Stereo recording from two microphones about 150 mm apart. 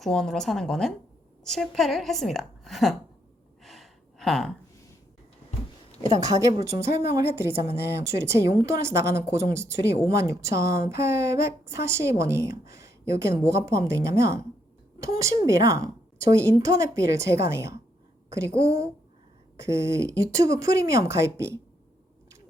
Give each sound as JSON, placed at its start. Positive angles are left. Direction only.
{"t": 0.0, "sound": "a woman's voice", "side_deg": 5}
{"t": 3.6, "sound": "gasp", "side_deg": 0}
{"t": 6.4, "sound": "a woman's voice", "side_deg": -20}